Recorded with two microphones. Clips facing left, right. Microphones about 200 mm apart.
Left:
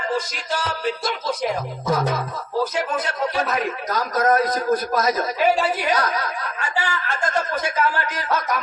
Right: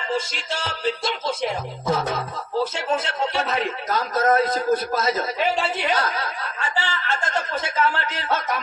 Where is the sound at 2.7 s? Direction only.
25° right (ahead or behind).